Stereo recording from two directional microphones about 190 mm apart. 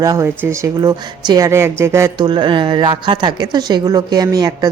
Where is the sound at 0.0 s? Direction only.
15° right (ahead or behind).